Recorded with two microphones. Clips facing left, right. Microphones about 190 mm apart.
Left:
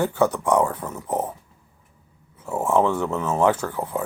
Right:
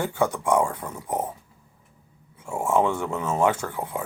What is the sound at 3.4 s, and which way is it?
Speech, 25° right (ahead or behind).